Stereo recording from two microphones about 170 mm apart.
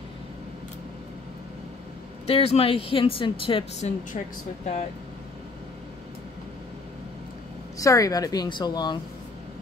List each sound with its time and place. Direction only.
2.2 s speech: 35° left (ahead or behind)
7.8 s speech: 20° left (ahead or behind)